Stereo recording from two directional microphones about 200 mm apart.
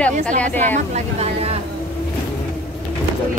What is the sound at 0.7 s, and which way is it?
Speech, 35° right (ahead or behind).